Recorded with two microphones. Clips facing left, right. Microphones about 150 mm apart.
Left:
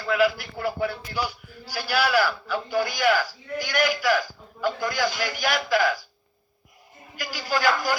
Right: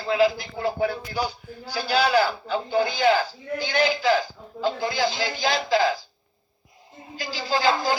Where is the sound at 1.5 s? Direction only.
70° left (ahead or behind).